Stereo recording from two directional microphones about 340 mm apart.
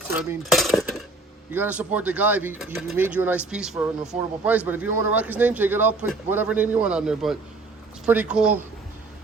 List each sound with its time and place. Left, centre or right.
0.2 s cutlery: centre
1.5 s a man's voice: centre